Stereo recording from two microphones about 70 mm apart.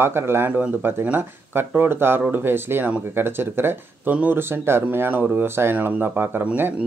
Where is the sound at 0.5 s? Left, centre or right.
Right.